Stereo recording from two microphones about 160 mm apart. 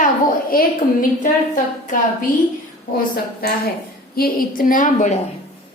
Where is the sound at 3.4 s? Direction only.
75° left (ahead or behind).